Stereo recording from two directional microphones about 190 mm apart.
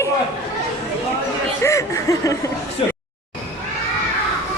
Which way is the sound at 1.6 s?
15° left (ahead or behind).